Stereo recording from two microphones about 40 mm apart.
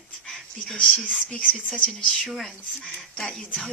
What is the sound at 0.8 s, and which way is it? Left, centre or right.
Speech, centre.